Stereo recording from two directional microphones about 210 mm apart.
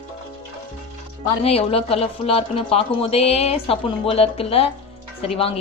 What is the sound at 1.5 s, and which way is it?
Speech, 25° left (ahead or behind).